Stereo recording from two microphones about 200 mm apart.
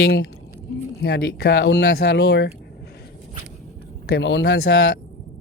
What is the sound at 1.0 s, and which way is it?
Speech, 50° left (ahead or behind).